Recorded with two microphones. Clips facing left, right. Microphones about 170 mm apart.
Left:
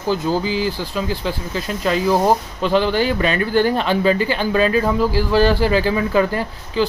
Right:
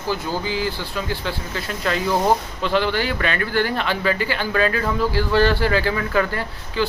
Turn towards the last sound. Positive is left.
turn(degrees=15)  # may be behind; listen again after turning